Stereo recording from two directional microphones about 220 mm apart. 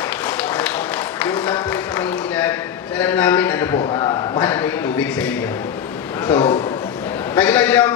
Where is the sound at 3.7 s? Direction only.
20° left (ahead or behind).